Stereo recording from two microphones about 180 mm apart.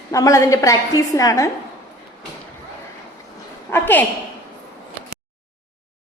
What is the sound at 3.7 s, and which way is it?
Speech, 10° left (ahead or behind).